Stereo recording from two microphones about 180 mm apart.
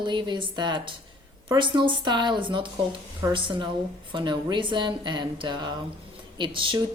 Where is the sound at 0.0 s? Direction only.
25° right (ahead or behind).